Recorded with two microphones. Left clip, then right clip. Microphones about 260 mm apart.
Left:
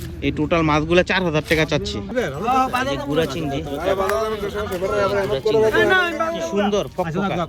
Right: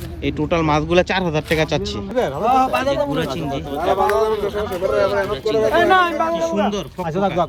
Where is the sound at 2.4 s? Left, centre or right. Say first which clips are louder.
Right 3 dB; right.